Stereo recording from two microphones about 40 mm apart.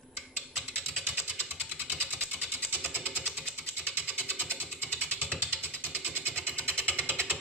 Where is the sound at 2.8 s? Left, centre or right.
Right.